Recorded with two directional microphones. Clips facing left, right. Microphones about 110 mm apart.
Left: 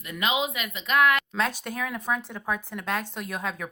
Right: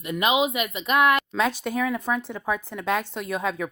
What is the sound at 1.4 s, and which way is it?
A woman's voice, 10° right (ahead or behind).